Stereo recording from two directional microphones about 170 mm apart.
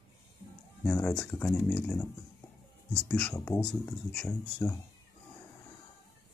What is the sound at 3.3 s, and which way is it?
Speech, 15° left (ahead or behind).